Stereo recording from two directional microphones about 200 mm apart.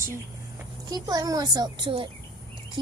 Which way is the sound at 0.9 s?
20° right (ahead or behind).